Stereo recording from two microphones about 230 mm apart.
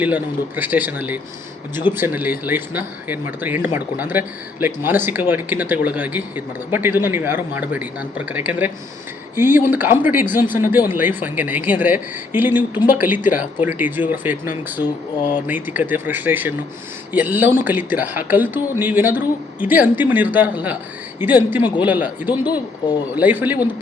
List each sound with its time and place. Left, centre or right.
0.0 s speech: centre
22.4 s speech: centre
23.1 s speech: centre